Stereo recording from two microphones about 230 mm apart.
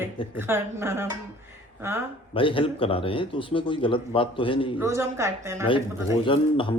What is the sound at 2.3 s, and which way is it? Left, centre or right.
Speech, left.